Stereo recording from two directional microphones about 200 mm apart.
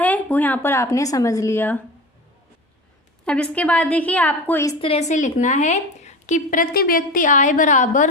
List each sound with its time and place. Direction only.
0.0 s a woman's voice: 10° left (ahead or behind)
3.2 s a woman's voice: 5° left (ahead or behind)
4.8 s a woman's voice: 30° left (ahead or behind)